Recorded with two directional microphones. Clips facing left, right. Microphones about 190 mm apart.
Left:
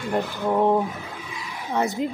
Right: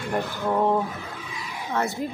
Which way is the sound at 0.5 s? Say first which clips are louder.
Left 2 dB; 15° left (ahead or behind).